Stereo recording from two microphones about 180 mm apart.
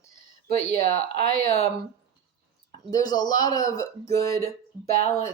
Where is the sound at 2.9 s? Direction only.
20° left (ahead or behind).